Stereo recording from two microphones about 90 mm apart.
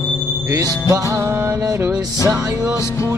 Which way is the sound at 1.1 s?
35° right (ahead or behind).